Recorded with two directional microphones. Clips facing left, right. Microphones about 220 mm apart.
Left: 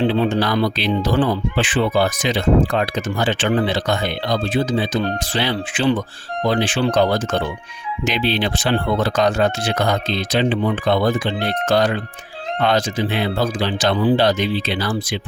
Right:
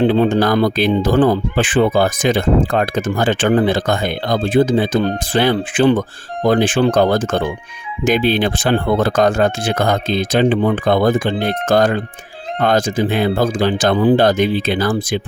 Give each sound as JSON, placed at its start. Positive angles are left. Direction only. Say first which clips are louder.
{"t": 0.0, "sound": "speech", "louder": "right 4 dB", "side_deg": -50}